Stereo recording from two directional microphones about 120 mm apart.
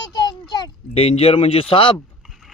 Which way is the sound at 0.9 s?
55° left (ahead or behind).